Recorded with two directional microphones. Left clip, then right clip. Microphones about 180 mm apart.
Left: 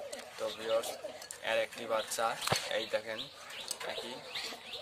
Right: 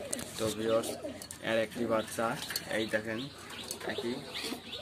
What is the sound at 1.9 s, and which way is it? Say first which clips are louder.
Speech: left 1 dB; 10° left (ahead or behind).